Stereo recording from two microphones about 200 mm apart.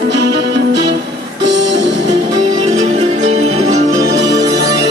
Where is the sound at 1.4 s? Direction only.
65° right (ahead or behind).